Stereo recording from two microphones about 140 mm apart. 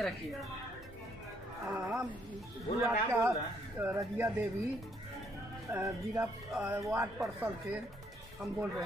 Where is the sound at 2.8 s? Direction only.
20° right (ahead or behind).